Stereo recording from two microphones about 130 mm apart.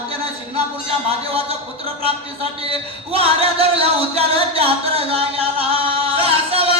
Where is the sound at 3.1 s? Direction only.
45° right (ahead or behind).